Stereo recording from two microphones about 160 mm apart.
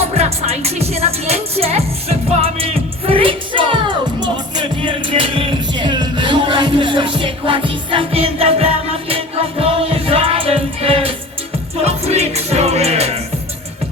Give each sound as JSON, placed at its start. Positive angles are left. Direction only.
{"t": 0.1, "sound": "music", "side_deg": -40}